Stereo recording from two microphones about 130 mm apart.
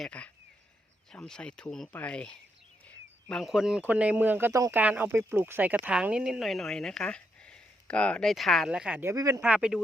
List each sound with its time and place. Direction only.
0.0 s speech: 10° left (ahead or behind); by 9.0 s 5° right (ahead or behind)
9.0 s speech: 25° right (ahead or behind)
9.4 s speech: 5° right (ahead or behind)